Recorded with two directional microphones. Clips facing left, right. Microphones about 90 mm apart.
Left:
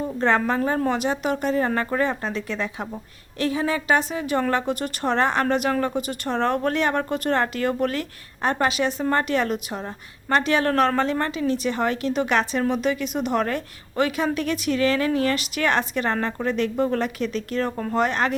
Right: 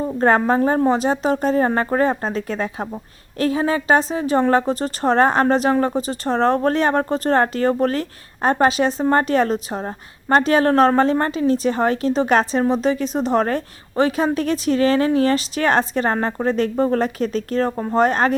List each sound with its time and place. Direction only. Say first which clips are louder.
0.0 s a woman's voice: right 5 dB; 40° right (ahead or behind)